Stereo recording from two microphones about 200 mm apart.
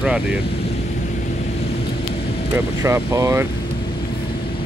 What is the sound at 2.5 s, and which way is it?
Speech, 15° right (ahead or behind).